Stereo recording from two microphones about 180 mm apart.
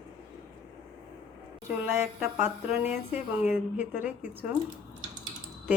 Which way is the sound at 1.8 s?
5° right (ahead or behind).